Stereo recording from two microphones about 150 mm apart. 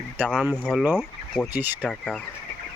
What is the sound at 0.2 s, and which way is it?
Speech, 10° right (ahead or behind).